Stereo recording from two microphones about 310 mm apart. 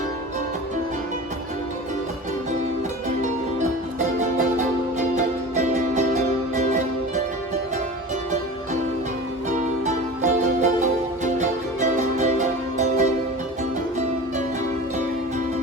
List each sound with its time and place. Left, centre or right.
4.2 s music: right
9.8 s music: right